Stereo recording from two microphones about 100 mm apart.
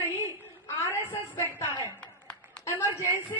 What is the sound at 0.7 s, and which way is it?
Speech, 20° left (ahead or behind).